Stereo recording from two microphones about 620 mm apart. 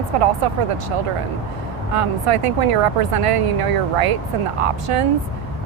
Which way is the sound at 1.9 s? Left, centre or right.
Right.